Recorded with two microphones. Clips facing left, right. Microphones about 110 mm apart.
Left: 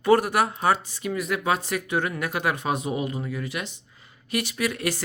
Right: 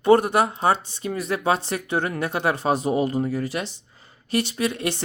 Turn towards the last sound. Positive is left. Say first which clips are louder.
# right 2 dB
turn(degrees=-25)  # may be behind; listen again after turning